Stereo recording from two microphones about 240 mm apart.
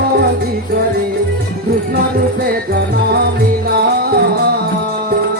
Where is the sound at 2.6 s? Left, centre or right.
Right.